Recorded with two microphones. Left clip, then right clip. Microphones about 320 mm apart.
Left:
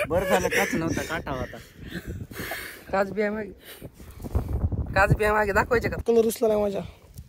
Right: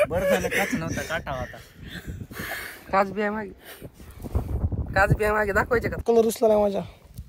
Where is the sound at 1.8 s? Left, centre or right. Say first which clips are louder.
Left 2 dB; centre.